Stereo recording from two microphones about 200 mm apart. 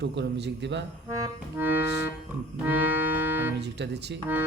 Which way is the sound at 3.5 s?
60° right (ahead or behind).